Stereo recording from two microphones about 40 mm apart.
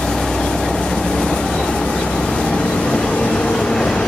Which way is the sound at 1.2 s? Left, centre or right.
Centre.